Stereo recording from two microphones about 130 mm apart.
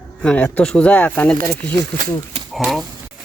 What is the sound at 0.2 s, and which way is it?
Speech, 10° left (ahead or behind).